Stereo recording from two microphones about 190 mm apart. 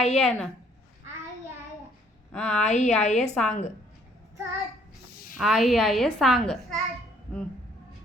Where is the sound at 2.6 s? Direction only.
35° left (ahead or behind).